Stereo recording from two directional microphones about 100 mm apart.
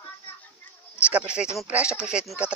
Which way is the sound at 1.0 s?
10° right (ahead or behind).